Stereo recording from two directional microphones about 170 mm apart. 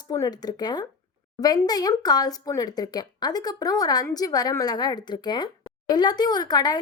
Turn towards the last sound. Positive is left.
turn(degrees=25)  # may be behind; listen again after turning